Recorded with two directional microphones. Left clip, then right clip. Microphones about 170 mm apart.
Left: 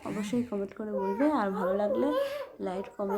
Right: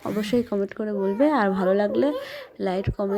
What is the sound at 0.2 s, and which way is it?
A child's voice, 25° right (ahead or behind).